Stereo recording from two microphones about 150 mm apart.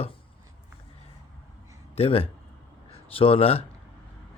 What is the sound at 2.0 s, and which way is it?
Speech, 40° left (ahead or behind).